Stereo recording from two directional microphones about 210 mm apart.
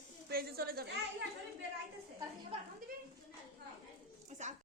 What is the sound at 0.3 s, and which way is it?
Speech, 45° right (ahead or behind).